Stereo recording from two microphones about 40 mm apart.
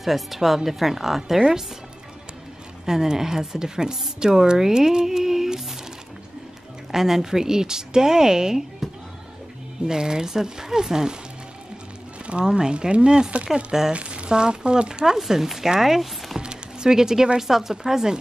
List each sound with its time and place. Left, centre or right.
0.0 s a woman's voice: centre
2.8 s a woman's voice: centre
6.9 s a woman's voice: centre
9.8 s a woman's voice: centre
12.3 s speech: right
13.7 s a woman's voice: centre
13.9 s speech: right
15.1 s a woman's voice: centre
16.3 s music: centre
17.4 s a woman's voice: centre